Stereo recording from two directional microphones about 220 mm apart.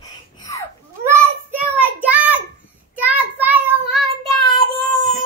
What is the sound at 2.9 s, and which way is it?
Child singing, 5° right (ahead or behind).